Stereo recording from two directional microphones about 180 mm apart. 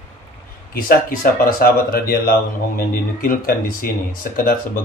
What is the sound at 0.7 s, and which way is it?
Speech, 50° left (ahead or behind).